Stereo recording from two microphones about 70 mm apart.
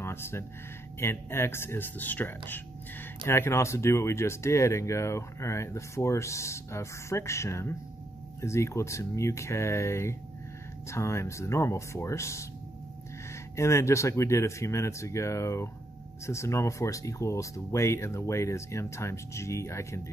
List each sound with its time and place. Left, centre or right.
0.0 s speech: left
3.3 s speech: left
13.6 s speech: left